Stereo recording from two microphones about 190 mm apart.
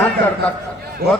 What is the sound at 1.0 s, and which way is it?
Speech, 55° right (ahead or behind).